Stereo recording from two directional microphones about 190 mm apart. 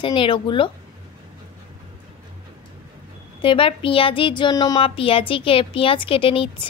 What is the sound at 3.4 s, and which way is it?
Speech, 25° left (ahead or behind).